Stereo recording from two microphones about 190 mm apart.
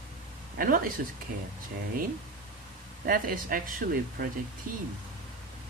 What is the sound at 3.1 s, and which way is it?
Speech, 50° right (ahead or behind).